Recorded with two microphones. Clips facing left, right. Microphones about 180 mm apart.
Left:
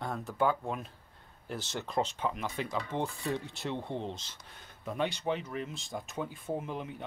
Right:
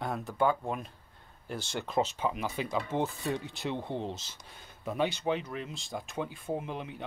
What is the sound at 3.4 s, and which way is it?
Speech, centre (ahead or behind).